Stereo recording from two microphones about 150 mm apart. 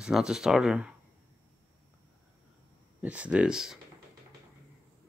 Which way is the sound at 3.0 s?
10° right (ahead or behind).